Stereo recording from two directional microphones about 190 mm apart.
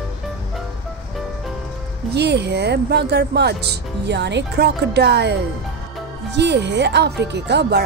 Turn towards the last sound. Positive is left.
turn(degrees=-60)  # may be behind; listen again after turning